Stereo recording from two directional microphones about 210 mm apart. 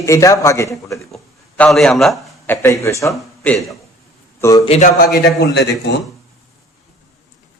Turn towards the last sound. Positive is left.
turn(degrees=55)  # may be behind; listen again after turning